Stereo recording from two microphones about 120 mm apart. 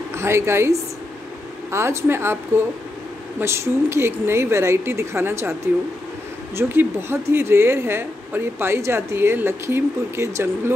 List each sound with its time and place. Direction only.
0.1 s a woman's voice: 20° right (ahead or behind)
6.5 s a woman's voice: 20° right (ahead or behind)